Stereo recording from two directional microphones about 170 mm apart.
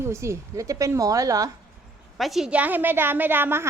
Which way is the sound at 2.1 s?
Centre (ahead or behind).